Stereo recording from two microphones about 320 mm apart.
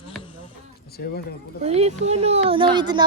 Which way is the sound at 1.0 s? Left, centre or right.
Left.